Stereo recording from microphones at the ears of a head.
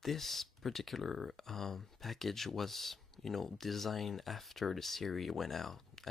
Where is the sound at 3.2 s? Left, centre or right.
Left.